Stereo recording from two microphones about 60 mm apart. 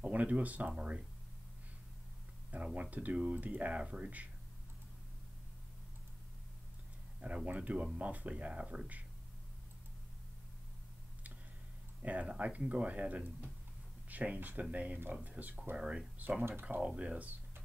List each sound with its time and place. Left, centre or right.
0.1 s speech: right
2.5 s speech: right
7.2 s speech: right
12.0 s speech: right